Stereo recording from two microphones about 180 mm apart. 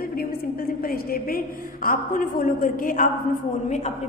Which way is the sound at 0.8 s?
55° left (ahead or behind).